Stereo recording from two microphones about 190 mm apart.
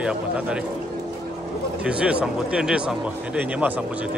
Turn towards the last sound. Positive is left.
turn(degrees=-5)  # may be behind; listen again after turning